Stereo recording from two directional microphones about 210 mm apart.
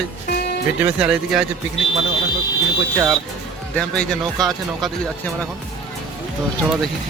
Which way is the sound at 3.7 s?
5° left (ahead or behind).